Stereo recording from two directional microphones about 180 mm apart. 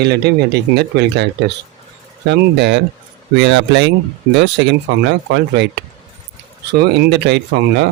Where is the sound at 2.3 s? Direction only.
70° right (ahead or behind).